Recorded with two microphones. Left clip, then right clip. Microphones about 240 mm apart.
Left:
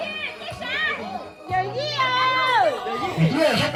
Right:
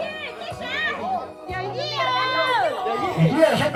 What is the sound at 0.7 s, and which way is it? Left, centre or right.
Music, right.